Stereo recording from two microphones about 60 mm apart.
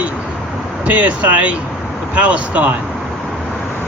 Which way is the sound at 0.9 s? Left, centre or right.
Right.